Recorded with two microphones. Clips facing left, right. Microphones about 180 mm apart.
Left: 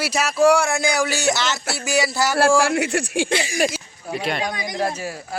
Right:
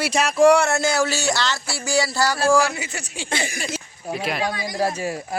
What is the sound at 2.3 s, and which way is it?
Speech, 65° left (ahead or behind).